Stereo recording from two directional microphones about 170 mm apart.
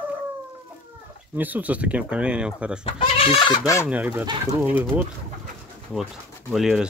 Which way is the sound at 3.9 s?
10° right (ahead or behind).